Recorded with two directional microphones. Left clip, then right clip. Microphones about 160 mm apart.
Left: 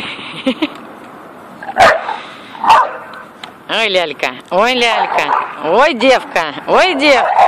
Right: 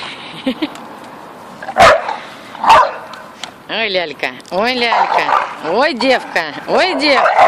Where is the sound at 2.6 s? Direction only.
20° right (ahead or behind).